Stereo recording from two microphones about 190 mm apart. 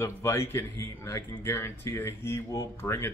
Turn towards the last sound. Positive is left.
turn(degrees=15)  # may be behind; listen again after turning